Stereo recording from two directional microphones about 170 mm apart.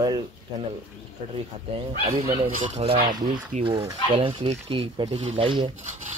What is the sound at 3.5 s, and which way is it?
Rub, 45° right (ahead or behind).